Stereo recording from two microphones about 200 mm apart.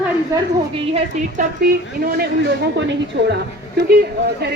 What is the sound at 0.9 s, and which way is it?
Speech, 40° right (ahead or behind).